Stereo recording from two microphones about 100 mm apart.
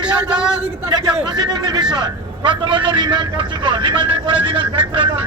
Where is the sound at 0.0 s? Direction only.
10° right (ahead or behind).